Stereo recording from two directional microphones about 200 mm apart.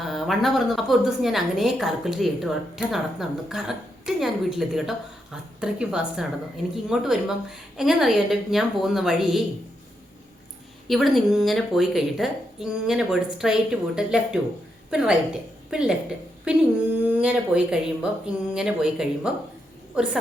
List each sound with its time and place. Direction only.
0.0 s a woman's voice: centre (ahead or behind)
10.8 s a woman's voice: centre (ahead or behind)